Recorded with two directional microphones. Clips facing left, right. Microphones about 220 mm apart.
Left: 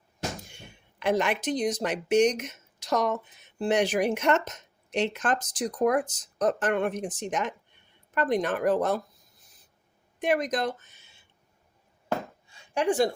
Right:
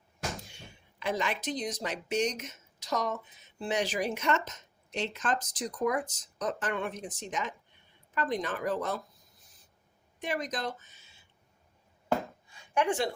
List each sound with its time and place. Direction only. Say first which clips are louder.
0.5 s a sound: left 2 dB; 60° left (ahead or behind)
1.6 s speech: left 8 dB; 75° left (ahead or behind)
5.8 s speech: left 6 dB; 55° left (ahead or behind)
7.3 s speech: left 5 dB; 75° left (ahead or behind)
8.1 s speech: left 6 dB; 60° left (ahead or behind)
10.2 s speech: left 8 dB; 55° left (ahead or behind)
12.5 s a sound: left 3 dB; 30° left (ahead or behind)